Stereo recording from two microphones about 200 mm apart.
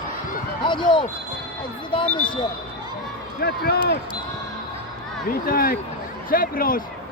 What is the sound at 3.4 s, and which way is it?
Speech, 50° left (ahead or behind).